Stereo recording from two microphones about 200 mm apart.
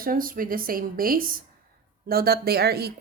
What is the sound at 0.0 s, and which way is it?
Speech, 45° right (ahead or behind).